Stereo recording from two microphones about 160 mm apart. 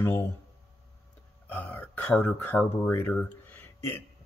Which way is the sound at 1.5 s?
10° left (ahead or behind).